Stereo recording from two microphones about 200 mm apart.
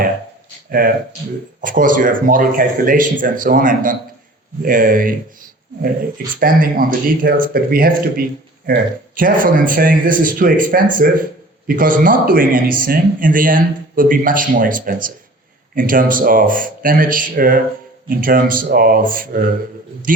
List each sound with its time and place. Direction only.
0.7 s speech: 45° right (ahead or behind)
6.4 s a man's voice: 45° right (ahead or behind)